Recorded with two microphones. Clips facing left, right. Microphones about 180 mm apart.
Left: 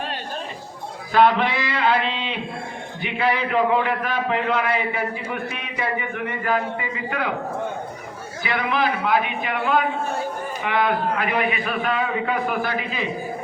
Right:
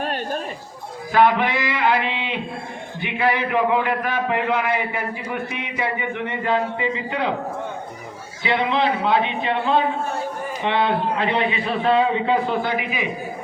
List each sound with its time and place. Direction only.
1.1 s a man's voice: 15° right (ahead or behind)
8.4 s a man's voice: 25° right (ahead or behind)